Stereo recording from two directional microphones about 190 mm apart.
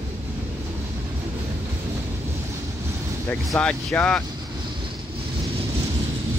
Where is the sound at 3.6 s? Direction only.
5° left (ahead or behind).